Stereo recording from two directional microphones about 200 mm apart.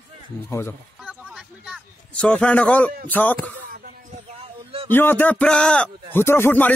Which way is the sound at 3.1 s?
10° left (ahead or behind).